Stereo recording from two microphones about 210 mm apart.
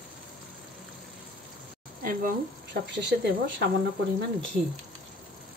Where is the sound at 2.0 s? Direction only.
50° right (ahead or behind).